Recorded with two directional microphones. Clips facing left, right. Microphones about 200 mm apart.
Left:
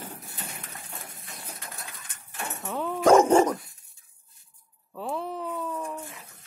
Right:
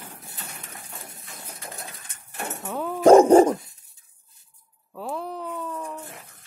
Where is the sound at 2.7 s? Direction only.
Centre (ahead or behind).